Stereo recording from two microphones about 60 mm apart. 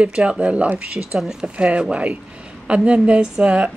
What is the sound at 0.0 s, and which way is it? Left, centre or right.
Speech, centre.